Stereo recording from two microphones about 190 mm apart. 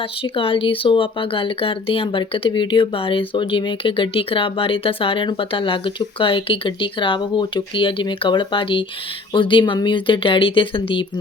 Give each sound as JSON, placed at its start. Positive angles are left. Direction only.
{"t": 0.2, "sound": "speech", "side_deg": 30}